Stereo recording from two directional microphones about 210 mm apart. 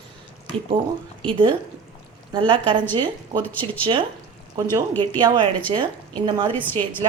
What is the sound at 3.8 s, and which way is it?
Speech, 25° right (ahead or behind).